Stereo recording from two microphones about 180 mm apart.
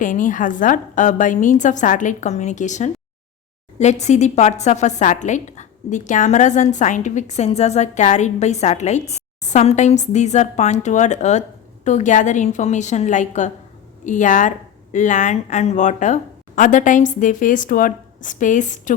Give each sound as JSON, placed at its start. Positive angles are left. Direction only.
{"t": 0.0, "sound": "a woman's voice", "side_deg": 45}